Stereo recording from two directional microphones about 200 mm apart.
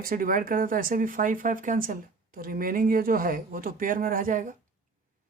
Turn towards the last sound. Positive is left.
turn(degrees=-45)  # may be behind; listen again after turning